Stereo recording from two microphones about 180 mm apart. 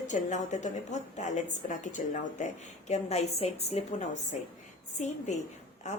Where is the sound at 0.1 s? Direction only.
40° left (ahead or behind).